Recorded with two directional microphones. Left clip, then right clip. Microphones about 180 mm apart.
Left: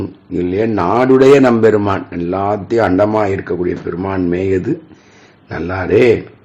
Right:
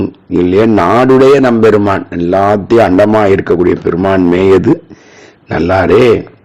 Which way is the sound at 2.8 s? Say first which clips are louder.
Right 5 dB; 50° right (ahead or behind).